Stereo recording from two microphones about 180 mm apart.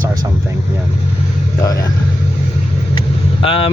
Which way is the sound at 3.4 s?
30° left (ahead or behind).